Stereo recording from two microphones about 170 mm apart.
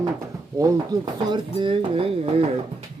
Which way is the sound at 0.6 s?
25° right (ahead or behind).